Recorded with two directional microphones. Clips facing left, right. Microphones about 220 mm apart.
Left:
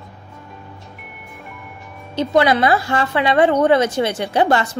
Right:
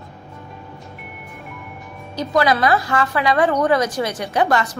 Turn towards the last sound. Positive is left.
turn(degrees=30)  # may be behind; listen again after turning